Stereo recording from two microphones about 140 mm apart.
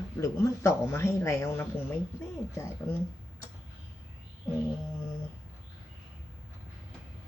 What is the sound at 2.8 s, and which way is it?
Speech, 15° left (ahead or behind).